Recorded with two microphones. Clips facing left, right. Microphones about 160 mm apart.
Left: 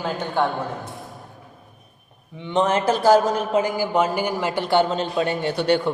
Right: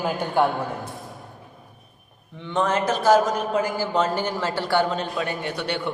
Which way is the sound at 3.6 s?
15° left (ahead or behind).